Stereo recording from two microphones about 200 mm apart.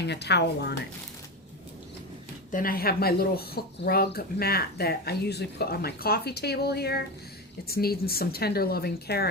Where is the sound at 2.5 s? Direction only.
45° left (ahead or behind).